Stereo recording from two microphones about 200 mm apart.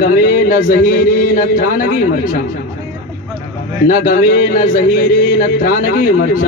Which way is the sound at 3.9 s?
45° left (ahead or behind).